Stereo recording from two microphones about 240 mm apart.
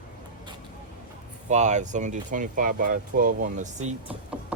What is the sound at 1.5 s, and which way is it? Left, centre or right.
Speech, right.